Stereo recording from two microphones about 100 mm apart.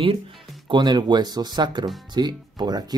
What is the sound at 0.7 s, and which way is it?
Speech, 50° right (ahead or behind).